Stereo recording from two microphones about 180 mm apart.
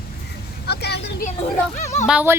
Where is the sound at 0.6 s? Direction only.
65° left (ahead or behind).